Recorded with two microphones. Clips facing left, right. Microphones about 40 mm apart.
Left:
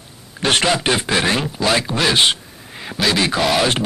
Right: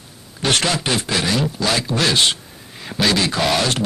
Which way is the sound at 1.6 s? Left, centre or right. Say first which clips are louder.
Left 2 dB; centre.